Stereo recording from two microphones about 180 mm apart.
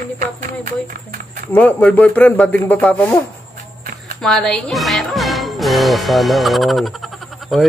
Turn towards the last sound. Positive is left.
turn(degrees=0)  # may be behind; listen again after turning